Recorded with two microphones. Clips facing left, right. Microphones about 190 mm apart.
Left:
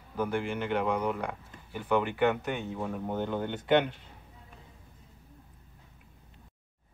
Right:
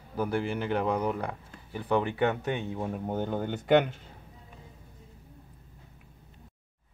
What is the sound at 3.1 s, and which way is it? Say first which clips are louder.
Speech: right 1 dB; 40° right (ahead or behind).